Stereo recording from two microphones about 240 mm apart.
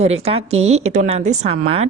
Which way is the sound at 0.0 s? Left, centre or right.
Right.